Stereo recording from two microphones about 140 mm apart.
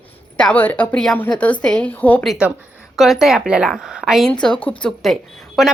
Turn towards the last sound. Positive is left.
turn(degrees=0)  # may be behind; listen again after turning